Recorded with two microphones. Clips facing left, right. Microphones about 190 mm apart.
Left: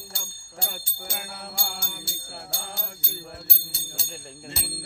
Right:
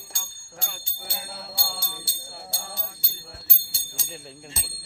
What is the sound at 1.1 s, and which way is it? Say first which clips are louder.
Music: left 1 dB; 50° left (ahead or behind).